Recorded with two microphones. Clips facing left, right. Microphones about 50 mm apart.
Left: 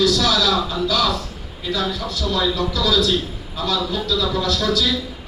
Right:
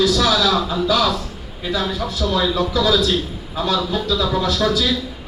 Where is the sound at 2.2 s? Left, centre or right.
Centre.